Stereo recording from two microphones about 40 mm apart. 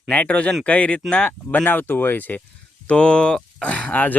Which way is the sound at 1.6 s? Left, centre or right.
Left.